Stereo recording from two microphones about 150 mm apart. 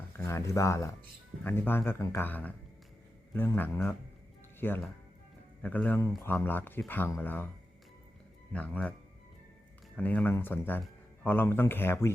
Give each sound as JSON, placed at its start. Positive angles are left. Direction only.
{"t": 0.2, "sound": "speech", "side_deg": 20}
{"t": 8.5, "sound": "speech", "side_deg": 10}